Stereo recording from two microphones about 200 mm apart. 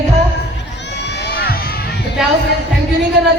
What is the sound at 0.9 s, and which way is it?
Crowd, 55° left (ahead or behind).